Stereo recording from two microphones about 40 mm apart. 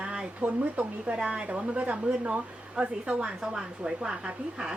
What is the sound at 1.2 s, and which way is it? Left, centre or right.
A woman's voice, right.